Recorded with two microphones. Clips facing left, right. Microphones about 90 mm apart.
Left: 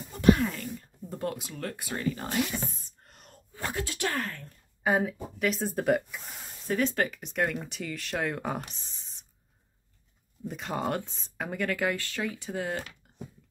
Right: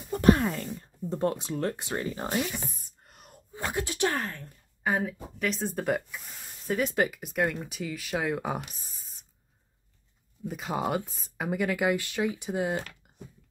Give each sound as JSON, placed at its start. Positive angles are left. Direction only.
{"t": 0.1, "sound": "speech", "side_deg": -40}
{"t": 3.0, "sound": "a sound", "side_deg": -5}
{"t": 3.3, "sound": "speech", "side_deg": -20}
{"t": 4.8, "sound": "a woman's voice", "side_deg": 0}
{"t": 6.7, "sound": "a woman's voice", "side_deg": -10}
{"t": 10.5, "sound": "speech", "side_deg": -5}